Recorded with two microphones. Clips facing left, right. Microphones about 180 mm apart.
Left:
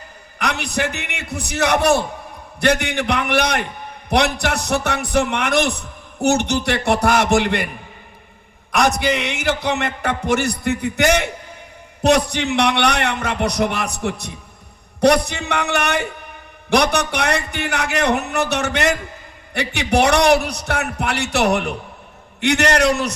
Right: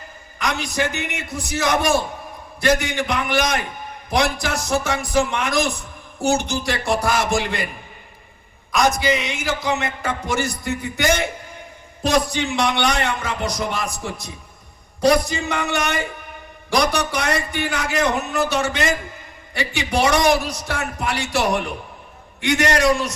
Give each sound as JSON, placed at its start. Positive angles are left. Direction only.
{"t": 0.3, "sound": "music", "side_deg": 65}
{"t": 8.7, "sound": "music", "side_deg": 65}